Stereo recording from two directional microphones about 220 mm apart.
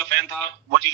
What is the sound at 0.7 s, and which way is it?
Speech, 55° right (ahead or behind).